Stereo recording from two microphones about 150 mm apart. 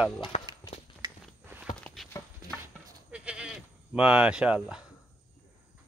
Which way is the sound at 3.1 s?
5° right (ahead or behind).